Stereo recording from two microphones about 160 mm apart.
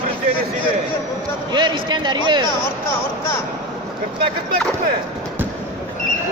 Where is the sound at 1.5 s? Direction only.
30° right (ahead or behind).